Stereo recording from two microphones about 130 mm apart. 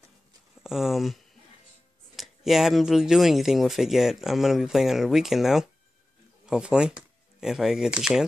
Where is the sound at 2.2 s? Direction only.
Centre (ahead or behind).